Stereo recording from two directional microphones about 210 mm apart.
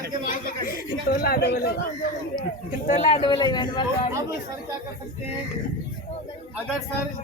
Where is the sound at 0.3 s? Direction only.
40° left (ahead or behind).